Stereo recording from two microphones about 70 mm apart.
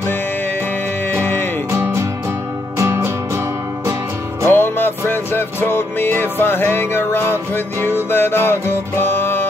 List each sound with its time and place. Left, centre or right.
1.1 s music: left
1.7 s music: right
4.5 s music: left